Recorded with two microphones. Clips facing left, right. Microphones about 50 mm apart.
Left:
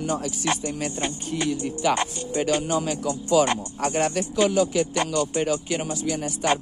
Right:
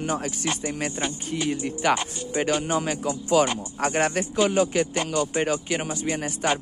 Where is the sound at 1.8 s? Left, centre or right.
Right.